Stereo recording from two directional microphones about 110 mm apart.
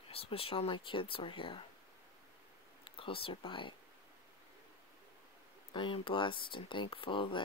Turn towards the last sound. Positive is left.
turn(degrees=50)  # may be behind; listen again after turning